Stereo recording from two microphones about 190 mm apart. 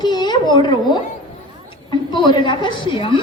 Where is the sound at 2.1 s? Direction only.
25° left (ahead or behind).